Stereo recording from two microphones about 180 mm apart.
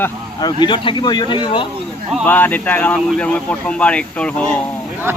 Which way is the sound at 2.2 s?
10° left (ahead or behind).